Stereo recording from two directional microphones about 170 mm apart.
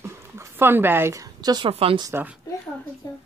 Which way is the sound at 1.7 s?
35° right (ahead or behind).